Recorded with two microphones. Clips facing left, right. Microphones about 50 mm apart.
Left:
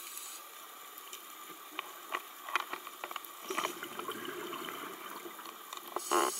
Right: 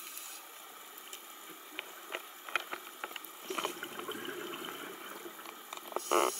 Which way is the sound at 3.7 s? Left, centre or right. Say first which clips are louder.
Even; centre.